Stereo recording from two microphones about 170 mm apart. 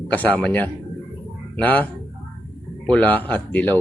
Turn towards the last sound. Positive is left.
turn(degrees=10)  # may be behind; listen again after turning